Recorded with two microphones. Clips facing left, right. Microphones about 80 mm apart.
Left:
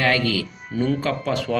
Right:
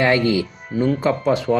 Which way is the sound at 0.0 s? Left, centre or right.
Right.